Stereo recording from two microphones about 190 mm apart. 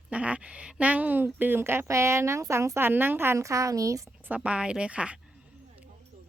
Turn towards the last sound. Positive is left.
turn(degrees=-5)  # may be behind; listen again after turning